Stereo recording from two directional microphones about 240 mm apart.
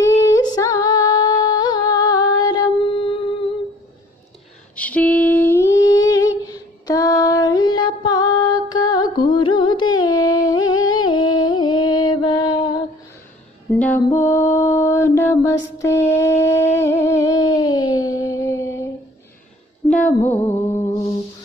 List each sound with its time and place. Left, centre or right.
0.0 s female singing: centre
4.7 s humming: centre
8.9 s music: centre
10.5 s music: left
10.9 s music: centre
13.7 s music: centre
15.8 s a sound: centre
19.9 s music: centre